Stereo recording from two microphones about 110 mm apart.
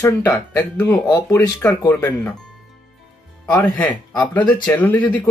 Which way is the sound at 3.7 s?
10° left (ahead or behind).